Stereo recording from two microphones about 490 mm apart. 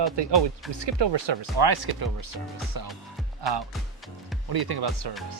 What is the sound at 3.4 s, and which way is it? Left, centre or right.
Speech, right.